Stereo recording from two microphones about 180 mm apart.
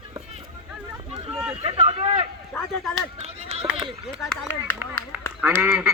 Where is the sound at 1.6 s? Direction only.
35° right (ahead or behind).